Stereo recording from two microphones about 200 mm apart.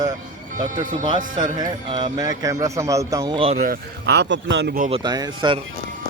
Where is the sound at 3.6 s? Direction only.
50° right (ahead or behind).